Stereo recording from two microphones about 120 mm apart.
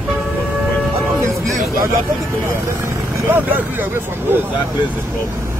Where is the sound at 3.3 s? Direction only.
15° right (ahead or behind).